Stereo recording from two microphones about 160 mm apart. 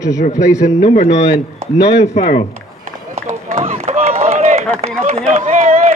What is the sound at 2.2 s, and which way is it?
Speech, 55° left (ahead or behind).